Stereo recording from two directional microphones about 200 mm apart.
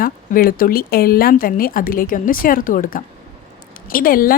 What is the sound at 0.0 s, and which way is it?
A woman's voice, 45° left (ahead or behind).